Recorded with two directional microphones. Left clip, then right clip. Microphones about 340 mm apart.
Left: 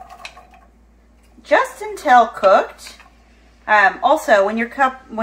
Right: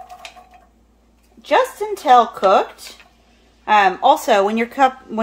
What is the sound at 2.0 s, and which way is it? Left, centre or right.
Speech, right.